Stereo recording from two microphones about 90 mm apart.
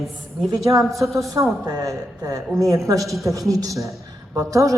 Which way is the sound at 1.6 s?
40° right (ahead or behind).